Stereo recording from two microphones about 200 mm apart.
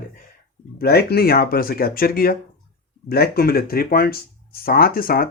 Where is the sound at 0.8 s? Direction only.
50° left (ahead or behind).